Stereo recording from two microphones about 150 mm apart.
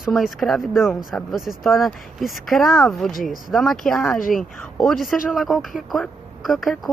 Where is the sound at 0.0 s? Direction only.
Centre (ahead or behind).